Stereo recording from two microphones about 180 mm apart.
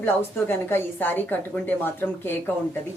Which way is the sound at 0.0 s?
10° left (ahead or behind).